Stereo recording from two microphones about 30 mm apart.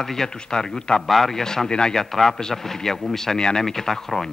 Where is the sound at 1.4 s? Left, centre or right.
Centre.